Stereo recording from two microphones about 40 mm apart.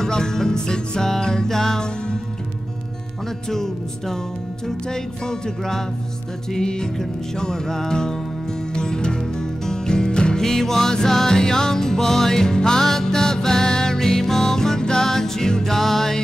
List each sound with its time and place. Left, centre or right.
0.0 s music: centre
3.4 s music: centre
10.4 s music: centre